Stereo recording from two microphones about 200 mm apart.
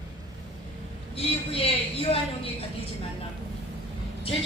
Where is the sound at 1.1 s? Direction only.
30° left (ahead or behind).